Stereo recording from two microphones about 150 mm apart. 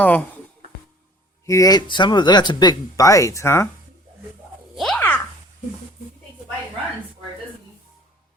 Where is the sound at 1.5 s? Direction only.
25° left (ahead or behind).